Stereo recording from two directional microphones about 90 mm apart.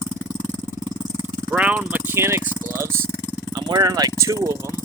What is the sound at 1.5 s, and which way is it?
Vehicle, 15° right (ahead or behind).